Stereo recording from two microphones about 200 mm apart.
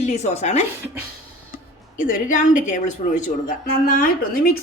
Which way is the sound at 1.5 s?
45° left (ahead or behind).